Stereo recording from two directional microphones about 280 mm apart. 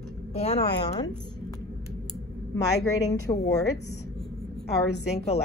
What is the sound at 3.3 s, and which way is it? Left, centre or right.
Speech, centre.